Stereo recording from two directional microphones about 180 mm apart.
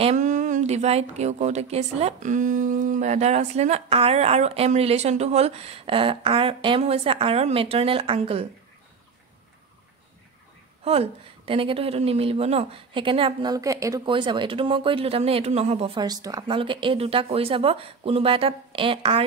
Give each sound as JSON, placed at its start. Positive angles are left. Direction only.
{"t": 0.0, "sound": "speech", "side_deg": -40}
{"t": 10.8, "sound": "speech", "side_deg": -35}